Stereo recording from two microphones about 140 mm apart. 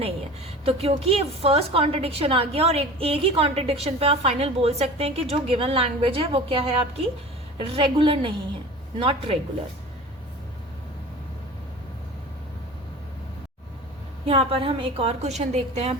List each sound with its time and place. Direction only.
0.6 s a woman's voice: 45° right (ahead or behind)
14.3 s a woman's voice: 40° right (ahead or behind)